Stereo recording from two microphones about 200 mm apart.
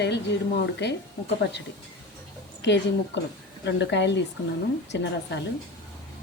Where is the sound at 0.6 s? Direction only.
60° left (ahead or behind).